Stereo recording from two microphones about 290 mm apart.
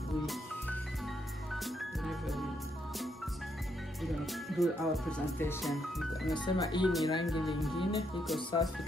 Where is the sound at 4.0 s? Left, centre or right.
Centre.